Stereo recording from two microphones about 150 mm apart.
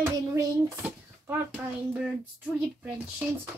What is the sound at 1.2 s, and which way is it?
A child's voice, 10° right (ahead or behind).